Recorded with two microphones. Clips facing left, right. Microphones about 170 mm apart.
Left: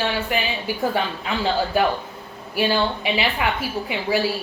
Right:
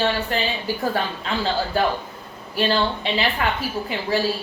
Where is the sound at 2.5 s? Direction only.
10° left (ahead or behind).